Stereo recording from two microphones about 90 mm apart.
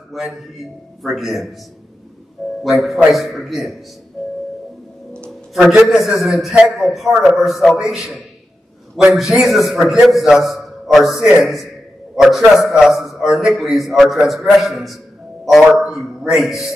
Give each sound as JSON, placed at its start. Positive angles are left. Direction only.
{"t": 0.1, "sound": "a man's voice", "side_deg": 0}
{"t": 2.6, "sound": "a man's voice", "side_deg": 0}
{"t": 5.5, "sound": "a man's voice", "side_deg": -5}